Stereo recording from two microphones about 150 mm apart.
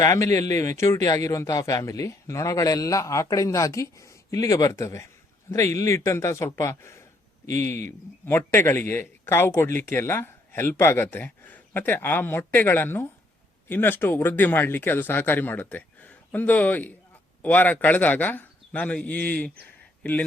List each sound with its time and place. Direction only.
0.0 s a man's voice: 20° left (ahead or behind)